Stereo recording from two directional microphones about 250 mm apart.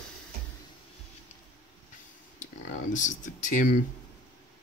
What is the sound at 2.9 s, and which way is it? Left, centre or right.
Speech, left.